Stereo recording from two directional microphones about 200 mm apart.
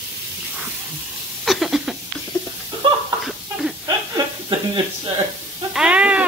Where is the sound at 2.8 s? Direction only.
25° right (ahead or behind).